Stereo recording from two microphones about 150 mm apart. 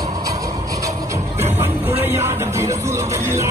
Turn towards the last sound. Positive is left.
turn(degrees=-20)  # may be behind; listen again after turning